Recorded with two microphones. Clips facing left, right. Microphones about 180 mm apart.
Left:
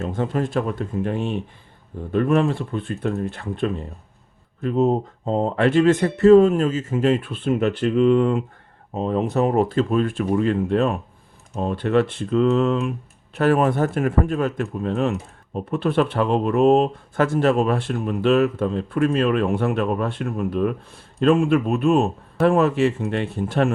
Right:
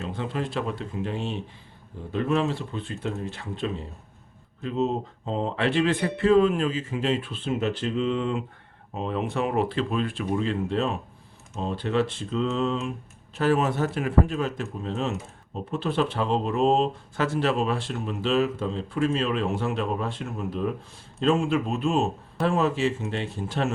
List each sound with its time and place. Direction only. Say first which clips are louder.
0.0 s speech: left 6 dB; 45° left (ahead or behind)
9.0 s speech: left 7 dB; 40° left (ahead or behind); by 23.7 s 55° left (ahead or behind)